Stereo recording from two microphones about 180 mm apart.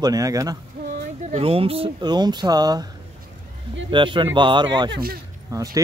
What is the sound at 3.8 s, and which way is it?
Speech, 25° right (ahead or behind).